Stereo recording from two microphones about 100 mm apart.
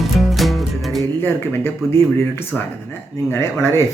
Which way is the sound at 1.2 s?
20° left (ahead or behind).